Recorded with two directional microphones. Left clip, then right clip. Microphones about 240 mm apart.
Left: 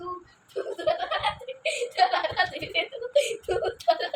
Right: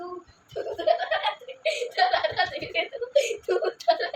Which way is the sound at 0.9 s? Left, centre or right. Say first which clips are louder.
Right 2 dB; centre.